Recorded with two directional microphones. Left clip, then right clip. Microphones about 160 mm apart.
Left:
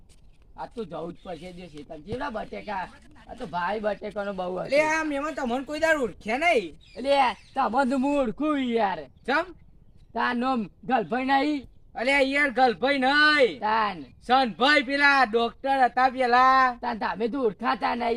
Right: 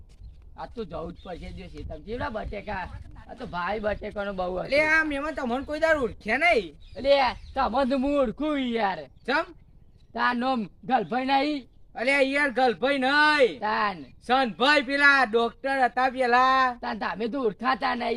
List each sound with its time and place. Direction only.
0.5 s speech: 5° right (ahead or behind)
1.2 s speech: 15° right (ahead or behind)
1.9 s speech: centre (ahead or behind)
4.7 s speech: 15° left (ahead or behind); by 6.7 s centre (ahead or behind)
6.9 s speech: 20° right (ahead or behind)
9.2 s a man's voice: 15° left (ahead or behind)
10.1 s speech: 15° right (ahead or behind)
11.9 s a man's voice: 15° left (ahead or behind)
13.6 s speech: 15° right (ahead or behind)
14.3 s a man's voice: 10° left (ahead or behind)
16.8 s speech: 15° right (ahead or behind)